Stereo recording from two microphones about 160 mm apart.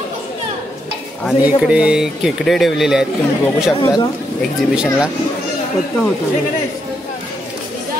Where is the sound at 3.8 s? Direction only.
25° left (ahead or behind).